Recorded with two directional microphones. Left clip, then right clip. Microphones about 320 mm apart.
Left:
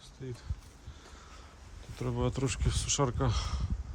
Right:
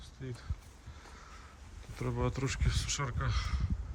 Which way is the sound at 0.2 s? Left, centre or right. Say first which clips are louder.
Left 2 dB; centre.